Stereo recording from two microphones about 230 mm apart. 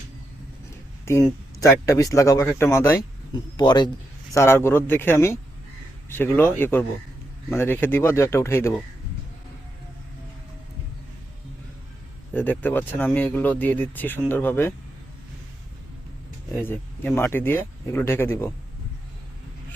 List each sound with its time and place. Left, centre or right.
1.0 s speech: centre
12.3 s speech: centre
16.6 s speech: centre